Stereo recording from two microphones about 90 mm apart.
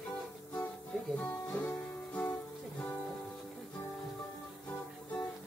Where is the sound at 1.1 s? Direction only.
20° left (ahead or behind).